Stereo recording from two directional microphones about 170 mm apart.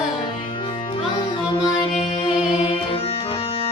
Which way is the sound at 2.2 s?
30° left (ahead or behind).